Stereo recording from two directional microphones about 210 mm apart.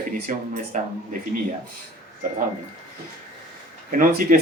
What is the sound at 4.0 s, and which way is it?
Speech, 40° right (ahead or behind).